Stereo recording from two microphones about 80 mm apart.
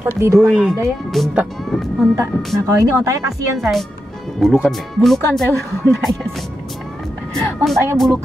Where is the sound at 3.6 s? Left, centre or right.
Centre.